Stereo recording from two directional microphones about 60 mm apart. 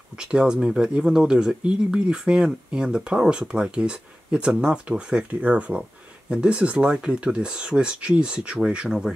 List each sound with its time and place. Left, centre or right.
0.2 s speech: centre